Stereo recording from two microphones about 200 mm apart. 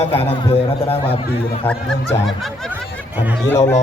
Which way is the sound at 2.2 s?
Centre (ahead or behind).